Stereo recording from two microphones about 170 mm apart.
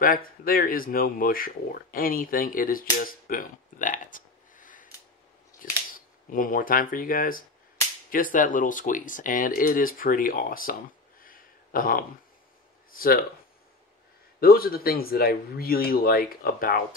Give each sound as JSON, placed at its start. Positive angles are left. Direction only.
{"t": 0.0, "sound": "speech", "side_deg": 55}
{"t": 14.4, "sound": "speech", "side_deg": 60}